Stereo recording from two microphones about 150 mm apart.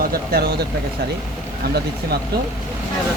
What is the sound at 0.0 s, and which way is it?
Speech, 85° right.